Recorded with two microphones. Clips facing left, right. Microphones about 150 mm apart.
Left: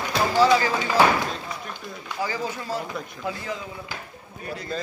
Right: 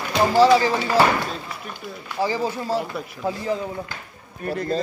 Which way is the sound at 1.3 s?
5° right (ahead or behind).